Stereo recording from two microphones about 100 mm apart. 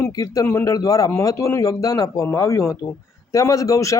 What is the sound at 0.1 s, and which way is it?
A man's voice, 35° left (ahead or behind).